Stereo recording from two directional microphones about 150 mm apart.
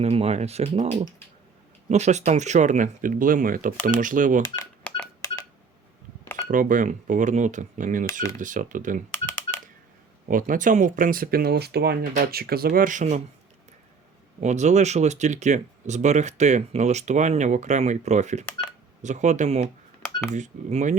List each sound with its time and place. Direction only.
0.0 s speech: 45° right (ahead or behind)
1.9 s speech: 50° right (ahead or behind)
4.9 s telephone dialing: 10° left (ahead or behind)
6.5 s speech: 60° right (ahead or behind)
10.2 s speech: 65° right (ahead or behind)
14.4 s speech: 50° right (ahead or behind)